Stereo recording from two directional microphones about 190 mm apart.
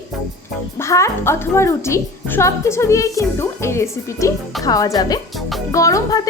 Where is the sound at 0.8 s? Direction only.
15° left (ahead or behind).